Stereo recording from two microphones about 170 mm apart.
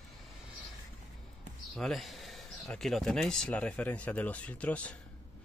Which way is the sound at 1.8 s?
Centre (ahead or behind).